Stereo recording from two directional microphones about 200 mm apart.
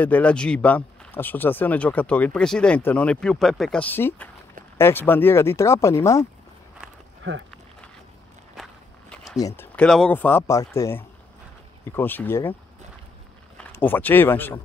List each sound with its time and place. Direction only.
0.0 s speech: 5° left (ahead or behind)
7.2 s speech: 65° right (ahead or behind)
9.6 s speech: 5° left (ahead or behind)
13.6 s speech: 10° left (ahead or behind)